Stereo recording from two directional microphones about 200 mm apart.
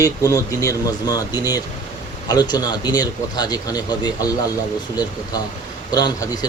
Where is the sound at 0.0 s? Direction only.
15° left (ahead or behind).